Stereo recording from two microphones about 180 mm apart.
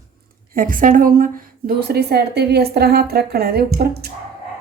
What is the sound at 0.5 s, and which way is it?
A woman's voice, 50° right (ahead or behind).